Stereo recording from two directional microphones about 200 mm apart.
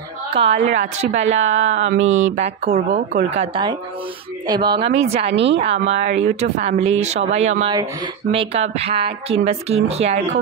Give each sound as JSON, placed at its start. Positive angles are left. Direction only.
{"t": 0.4, "sound": "a woman's voice", "side_deg": -35}
{"t": 1.9, "sound": "a sound", "side_deg": -75}
{"t": 2.2, "sound": "a woman's voice", "side_deg": -35}
{"t": 5.3, "sound": "a woman's voice", "side_deg": -65}
{"t": 5.6, "sound": "a woman's voice", "side_deg": -30}